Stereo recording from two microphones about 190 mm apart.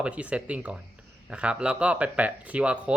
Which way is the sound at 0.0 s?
5° right (ahead or behind).